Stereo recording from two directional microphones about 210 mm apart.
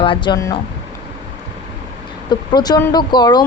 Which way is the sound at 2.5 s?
20° left (ahead or behind).